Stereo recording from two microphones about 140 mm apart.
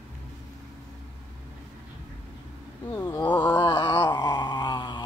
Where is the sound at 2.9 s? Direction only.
20° left (ahead or behind).